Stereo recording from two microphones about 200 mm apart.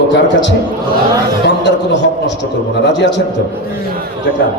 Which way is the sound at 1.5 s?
60° left (ahead or behind).